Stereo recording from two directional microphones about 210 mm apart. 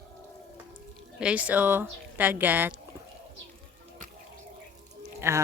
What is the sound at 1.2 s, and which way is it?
Speech, 5° right (ahead or behind).